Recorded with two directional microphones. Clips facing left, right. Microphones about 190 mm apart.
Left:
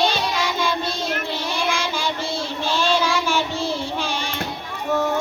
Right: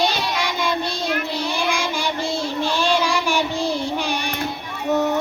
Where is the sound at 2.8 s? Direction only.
15° right (ahead or behind).